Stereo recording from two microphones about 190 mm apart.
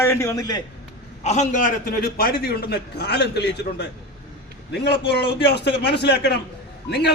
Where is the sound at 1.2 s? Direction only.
35° left (ahead or behind).